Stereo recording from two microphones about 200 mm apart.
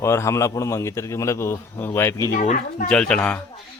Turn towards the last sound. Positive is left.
turn(degrees=5)  # may be behind; listen again after turning